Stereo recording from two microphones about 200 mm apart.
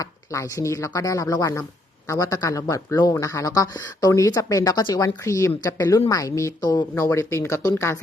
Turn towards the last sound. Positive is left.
turn(degrees=10)  # may be behind; listen again after turning